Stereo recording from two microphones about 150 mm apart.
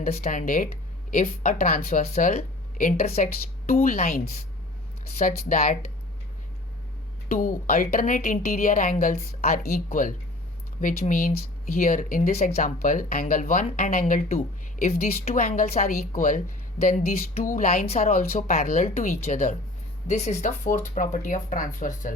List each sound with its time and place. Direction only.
0.0 s speech: 50° left (ahead or behind); by 2.0 s 75° left (ahead or behind)
2.1 s speech: 55° left (ahead or behind)
3.7 s speech: 75° left (ahead or behind)
5.1 s speech: 60° left (ahead or behind)
7.3 s speech: 70° left (ahead or behind); by 15.4 s 45° left (ahead or behind)
15.4 s speech: 55° left (ahead or behind)
16.0 s speech: 60° left (ahead or behind)
17.4 s speech: 60° left (ahead or behind)
18.1 s speech: 60° left (ahead or behind)